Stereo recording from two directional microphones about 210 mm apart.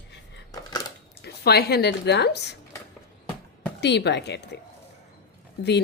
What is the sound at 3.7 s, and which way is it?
Speech, 55° left (ahead or behind).